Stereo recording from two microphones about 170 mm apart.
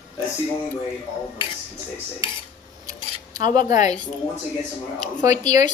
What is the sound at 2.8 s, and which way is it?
Cutlery, 25° right (ahead or behind).